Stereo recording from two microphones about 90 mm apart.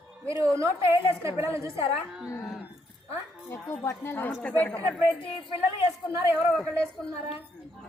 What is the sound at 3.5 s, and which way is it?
Speech, 25° left (ahead or behind).